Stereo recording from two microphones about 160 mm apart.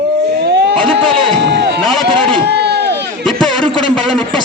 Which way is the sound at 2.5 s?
90° right.